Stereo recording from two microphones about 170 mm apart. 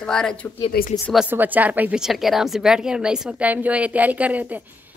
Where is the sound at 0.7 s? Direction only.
60° left (ahead or behind).